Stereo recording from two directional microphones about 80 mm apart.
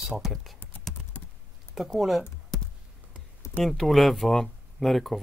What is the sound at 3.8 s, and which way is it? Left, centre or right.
Speech, centre.